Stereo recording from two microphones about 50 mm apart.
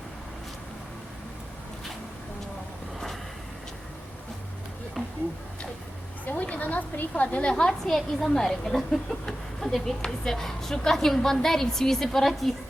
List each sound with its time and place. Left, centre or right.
5.0 s a sound: centre
6.2 s a woman's voice: left
7.7 s a woman's voice: centre